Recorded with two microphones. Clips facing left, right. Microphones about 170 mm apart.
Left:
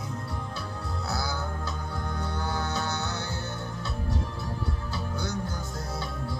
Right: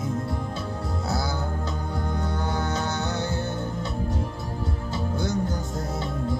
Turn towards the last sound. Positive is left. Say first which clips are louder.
# right 6 dB
turn(degrees=-20)  # may be behind; listen again after turning